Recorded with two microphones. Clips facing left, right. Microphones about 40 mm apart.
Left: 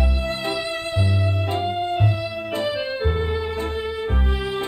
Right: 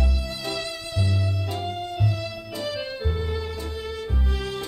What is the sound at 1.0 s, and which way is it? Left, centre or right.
Music, left.